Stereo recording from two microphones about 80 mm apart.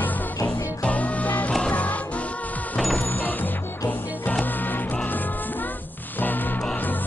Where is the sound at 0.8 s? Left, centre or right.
Centre.